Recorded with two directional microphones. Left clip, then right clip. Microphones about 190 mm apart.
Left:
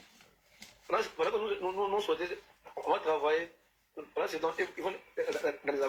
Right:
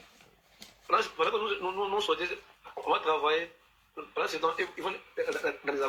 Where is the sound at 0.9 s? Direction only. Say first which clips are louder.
Right 4 dB; 10° left (ahead or behind).